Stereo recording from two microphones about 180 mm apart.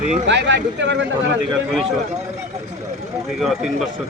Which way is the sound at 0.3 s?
80° right.